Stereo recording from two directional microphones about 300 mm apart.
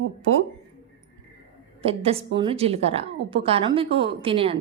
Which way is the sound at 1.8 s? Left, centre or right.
Centre.